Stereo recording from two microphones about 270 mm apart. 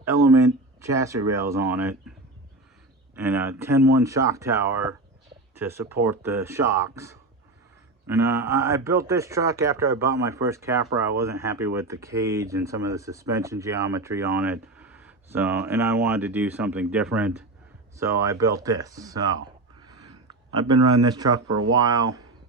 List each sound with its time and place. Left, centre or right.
0.0 s speech: centre
3.2 s speech: centre
19.8 s a sound: centre
20.9 s speech: centre
21.4 s speech: right
21.7 s speech: centre